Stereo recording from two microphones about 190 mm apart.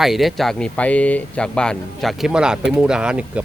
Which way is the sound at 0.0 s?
Centre (ahead or behind).